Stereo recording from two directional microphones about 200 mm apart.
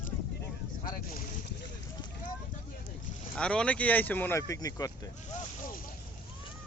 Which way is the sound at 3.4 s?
5° left (ahead or behind).